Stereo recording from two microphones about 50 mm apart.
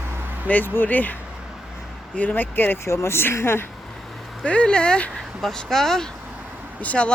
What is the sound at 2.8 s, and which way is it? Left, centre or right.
Speech, left.